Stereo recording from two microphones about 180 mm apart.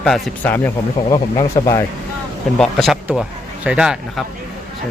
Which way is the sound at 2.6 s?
Centre (ahead or behind).